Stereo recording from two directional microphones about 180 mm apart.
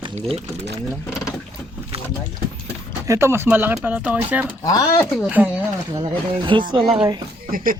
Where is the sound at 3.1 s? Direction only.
15° right (ahead or behind).